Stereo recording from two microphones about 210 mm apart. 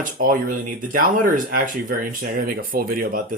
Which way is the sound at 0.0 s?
40° right (ahead or behind).